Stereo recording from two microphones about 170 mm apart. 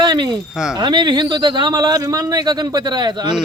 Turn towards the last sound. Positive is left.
turn(degrees=-25)  # may be behind; listen again after turning